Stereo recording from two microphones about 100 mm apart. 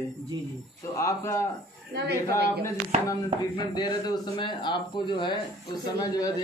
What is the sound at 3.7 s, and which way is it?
Speech, 45° left (ahead or behind).